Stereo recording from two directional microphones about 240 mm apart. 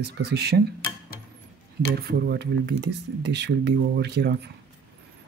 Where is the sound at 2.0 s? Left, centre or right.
Right.